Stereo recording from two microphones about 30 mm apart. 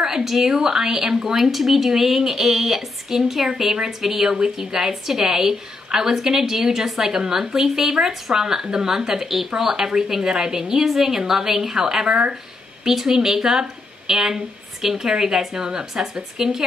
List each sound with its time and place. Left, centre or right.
0.2 s a woman's voice: centre
0.5 s a woman's voice: centre
1.2 s a woman's voice: centre
12.1 s speech: right
12.8 s a woman's voice: centre